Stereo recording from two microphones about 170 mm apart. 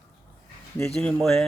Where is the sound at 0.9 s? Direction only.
5° left (ahead or behind).